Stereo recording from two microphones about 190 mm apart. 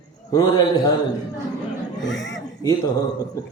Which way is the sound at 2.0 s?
70° left (ahead or behind).